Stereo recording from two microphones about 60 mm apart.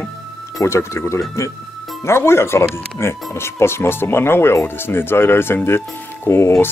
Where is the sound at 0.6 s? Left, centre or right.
Left.